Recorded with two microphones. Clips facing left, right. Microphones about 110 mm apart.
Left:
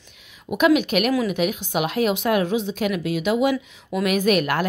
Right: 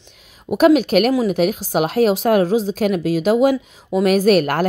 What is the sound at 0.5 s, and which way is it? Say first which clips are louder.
Speech: right 5 dB; 40° right (ahead or behind).